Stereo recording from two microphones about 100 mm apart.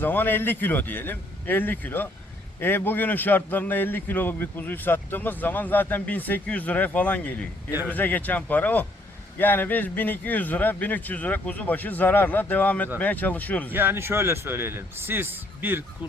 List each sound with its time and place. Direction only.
0.0 s a man's voice: 20° left (ahead or behind)
13.7 s a man's voice: 20° right (ahead or behind)